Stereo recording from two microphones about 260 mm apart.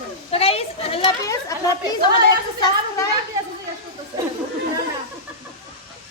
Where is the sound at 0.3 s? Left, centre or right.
Left.